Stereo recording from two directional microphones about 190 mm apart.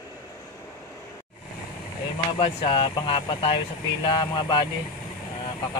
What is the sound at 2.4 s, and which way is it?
Speech, 30° left (ahead or behind).